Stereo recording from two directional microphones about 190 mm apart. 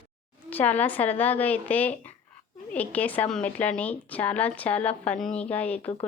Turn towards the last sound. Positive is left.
turn(degrees=10)  # may be behind; listen again after turning